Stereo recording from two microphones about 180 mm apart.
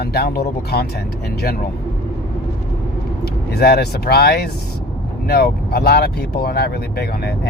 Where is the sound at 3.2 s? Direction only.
60° left (ahead or behind).